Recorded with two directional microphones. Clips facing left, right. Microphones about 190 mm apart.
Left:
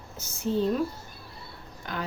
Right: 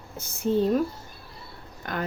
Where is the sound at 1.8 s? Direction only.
50° right (ahead or behind).